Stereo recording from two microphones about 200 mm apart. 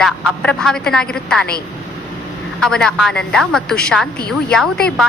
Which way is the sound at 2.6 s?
5° left (ahead or behind).